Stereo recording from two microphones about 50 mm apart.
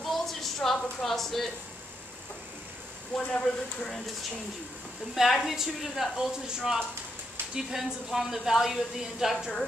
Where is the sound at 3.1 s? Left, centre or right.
Centre.